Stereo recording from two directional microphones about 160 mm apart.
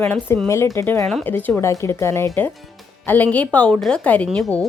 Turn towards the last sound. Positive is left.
turn(degrees=0)  # may be behind; listen again after turning